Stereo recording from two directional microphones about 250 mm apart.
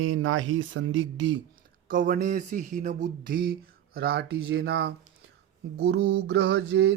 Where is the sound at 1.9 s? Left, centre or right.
Right.